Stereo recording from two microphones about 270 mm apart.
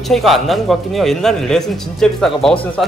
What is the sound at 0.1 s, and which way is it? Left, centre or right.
Speech, centre.